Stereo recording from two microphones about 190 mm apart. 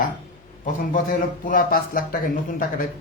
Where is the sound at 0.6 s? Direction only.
45° left (ahead or behind).